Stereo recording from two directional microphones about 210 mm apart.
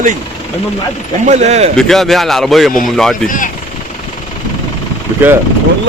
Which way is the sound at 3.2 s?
40° left (ahead or behind).